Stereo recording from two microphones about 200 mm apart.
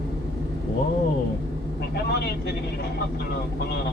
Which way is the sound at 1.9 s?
55° left (ahead or behind).